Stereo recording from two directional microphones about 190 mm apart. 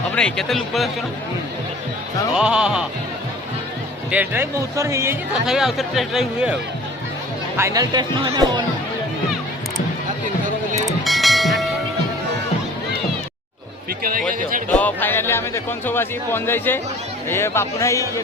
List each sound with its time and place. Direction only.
0.1 s speech: 5° left (ahead or behind)
2.3 s speech: 5° right (ahead or behind)
4.1 s speech: 10° right (ahead or behind)
5.5 s speech: centre (ahead or behind)
7.5 s speech: 15° right (ahead or behind)
11.0 s train: centre (ahead or behind)
14.7 s speech: 10° left (ahead or behind)